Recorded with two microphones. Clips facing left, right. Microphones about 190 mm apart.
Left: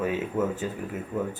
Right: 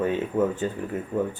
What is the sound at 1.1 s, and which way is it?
Speech, 30° right (ahead or behind).